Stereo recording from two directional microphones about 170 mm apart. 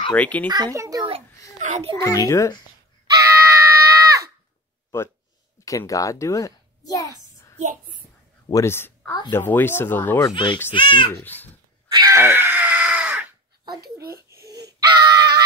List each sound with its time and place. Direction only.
0.1 s speech: 10° left (ahead or behind)
0.7 s a child's voice: 20° right (ahead or behind)
1.6 s a sound: 45° right (ahead or behind)
2.0 s a child's voice: 20° left (ahead or behind)
3.1 s screaming: 20° right (ahead or behind)
4.9 s a child's voice: 15° left (ahead or behind)
7.5 s a child's voice: 45° right (ahead or behind)
8.5 s speech: 15° left (ahead or behind)
10.3 s a child's voice: 30° left (ahead or behind)
11.1 s speech: 10° left (ahead or behind)
11.9 s screaming: 20° right (ahead or behind)
14.3 s crying: 20° right (ahead or behind)
14.7 s wail: 25° right (ahead or behind)